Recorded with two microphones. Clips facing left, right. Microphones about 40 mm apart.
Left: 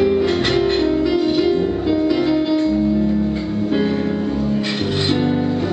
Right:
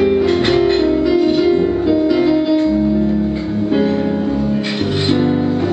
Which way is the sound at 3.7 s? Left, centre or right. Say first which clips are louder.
Right 4 dB; centre.